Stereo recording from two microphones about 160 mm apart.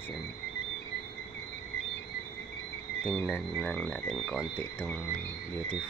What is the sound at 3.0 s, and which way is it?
Speech, 10° left (ahead or behind).